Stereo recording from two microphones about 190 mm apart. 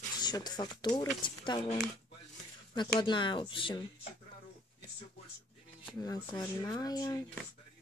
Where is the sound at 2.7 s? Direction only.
25° left (ahead or behind).